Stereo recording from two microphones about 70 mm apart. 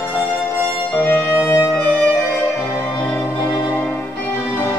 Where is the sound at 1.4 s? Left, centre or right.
Left.